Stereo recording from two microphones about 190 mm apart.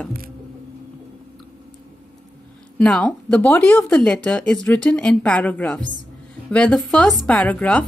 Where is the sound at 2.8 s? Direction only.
5° left (ahead or behind).